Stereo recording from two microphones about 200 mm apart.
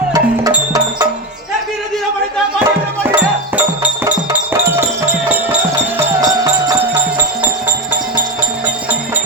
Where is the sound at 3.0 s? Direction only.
10° right (ahead or behind).